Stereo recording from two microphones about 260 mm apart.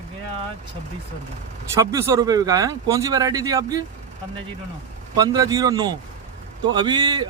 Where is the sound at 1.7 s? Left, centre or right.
Centre.